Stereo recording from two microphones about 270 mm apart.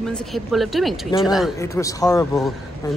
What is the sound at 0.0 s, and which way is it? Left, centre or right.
Speech, centre.